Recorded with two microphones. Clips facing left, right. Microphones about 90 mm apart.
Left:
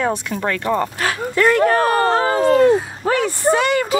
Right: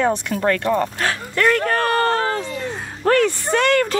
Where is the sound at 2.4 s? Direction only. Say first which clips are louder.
Left 15 dB; 55° left (ahead or behind).